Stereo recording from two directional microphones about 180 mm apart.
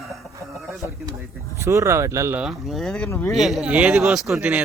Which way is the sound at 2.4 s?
Centre (ahead or behind).